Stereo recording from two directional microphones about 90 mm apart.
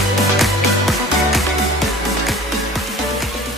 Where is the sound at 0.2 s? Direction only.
Centre (ahead or behind).